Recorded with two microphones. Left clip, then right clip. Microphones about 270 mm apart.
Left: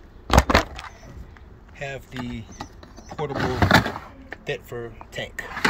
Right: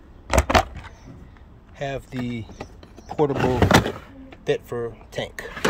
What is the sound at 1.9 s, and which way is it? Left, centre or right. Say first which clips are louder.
Speech: right 3 dB; right.